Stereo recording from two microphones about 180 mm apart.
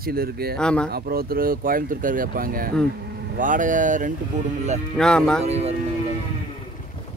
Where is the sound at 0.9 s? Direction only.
55° right (ahead or behind).